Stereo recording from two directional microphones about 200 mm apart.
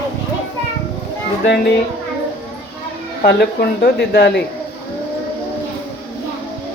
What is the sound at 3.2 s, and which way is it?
Speech, 55° left (ahead or behind).